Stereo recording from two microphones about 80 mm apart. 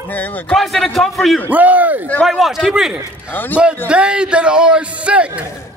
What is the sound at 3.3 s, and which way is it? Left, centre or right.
Speech, left.